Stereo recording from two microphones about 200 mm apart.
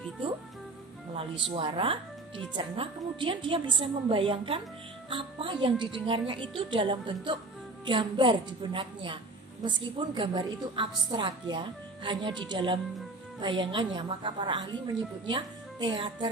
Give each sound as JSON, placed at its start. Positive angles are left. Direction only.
{"t": 1.5, "sound": "a woman's voice", "side_deg": -25}